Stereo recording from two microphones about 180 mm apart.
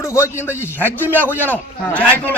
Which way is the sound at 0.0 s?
15° left (ahead or behind).